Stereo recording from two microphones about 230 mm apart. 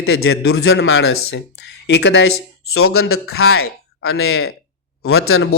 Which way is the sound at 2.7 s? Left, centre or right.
Left.